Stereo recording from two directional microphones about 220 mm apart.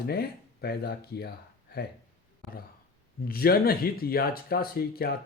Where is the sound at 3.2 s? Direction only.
45° left (ahead or behind).